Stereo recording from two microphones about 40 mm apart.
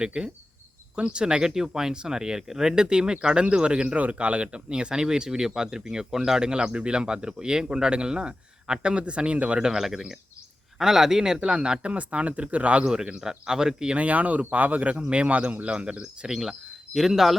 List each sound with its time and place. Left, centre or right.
0.0 s speech: centre
9.6 s speech: centre; by 12.8 s right
12.8 s speech: centre
13.9 s speech: right; by 17.3 s centre